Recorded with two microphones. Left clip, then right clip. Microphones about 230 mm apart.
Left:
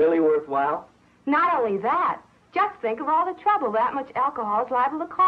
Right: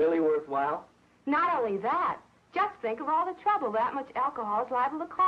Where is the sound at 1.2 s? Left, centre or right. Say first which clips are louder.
Left 6 dB; right.